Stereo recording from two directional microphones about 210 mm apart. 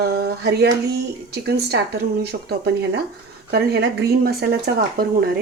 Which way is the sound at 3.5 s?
50° right (ahead or behind).